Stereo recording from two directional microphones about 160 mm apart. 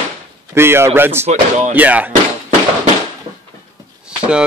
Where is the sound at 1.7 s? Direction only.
10° right (ahead or behind).